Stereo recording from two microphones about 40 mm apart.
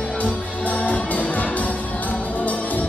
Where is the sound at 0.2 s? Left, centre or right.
Left.